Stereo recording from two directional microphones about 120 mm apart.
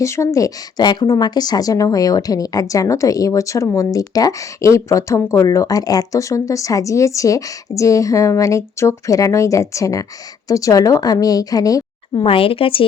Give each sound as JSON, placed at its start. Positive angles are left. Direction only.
{"t": 0.0, "sound": "a woman's voice", "side_deg": 25}
{"t": 12.2, "sound": "speech", "side_deg": 50}